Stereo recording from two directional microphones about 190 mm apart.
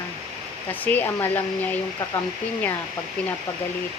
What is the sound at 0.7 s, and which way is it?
Speech, 10° left (ahead or behind).